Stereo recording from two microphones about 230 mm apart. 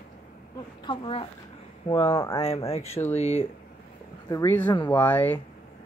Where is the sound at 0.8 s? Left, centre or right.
Left.